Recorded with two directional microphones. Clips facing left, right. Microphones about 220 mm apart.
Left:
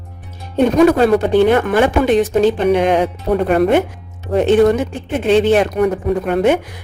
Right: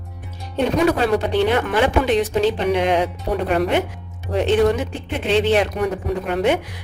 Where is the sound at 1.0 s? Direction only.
50° left (ahead or behind).